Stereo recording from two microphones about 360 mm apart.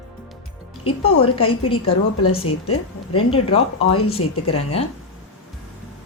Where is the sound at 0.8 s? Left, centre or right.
Centre.